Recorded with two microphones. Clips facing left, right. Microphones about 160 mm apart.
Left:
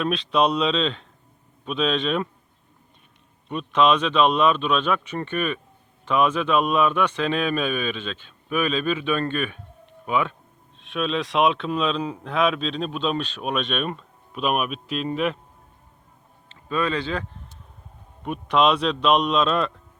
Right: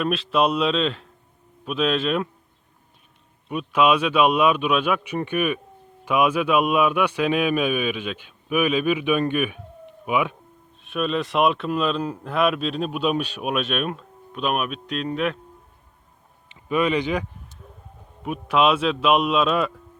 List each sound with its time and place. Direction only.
0.0 s speech: 5° right (ahead or behind)
3.5 s speech: 10° right (ahead or behind)
16.5 s speech: 15° right (ahead or behind)
18.2 s speech: 5° right (ahead or behind)